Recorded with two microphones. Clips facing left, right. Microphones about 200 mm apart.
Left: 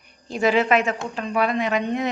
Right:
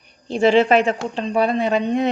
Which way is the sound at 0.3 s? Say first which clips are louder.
Right 5 dB; 30° right (ahead or behind).